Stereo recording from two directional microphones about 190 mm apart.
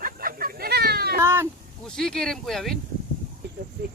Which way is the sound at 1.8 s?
5° left (ahead or behind).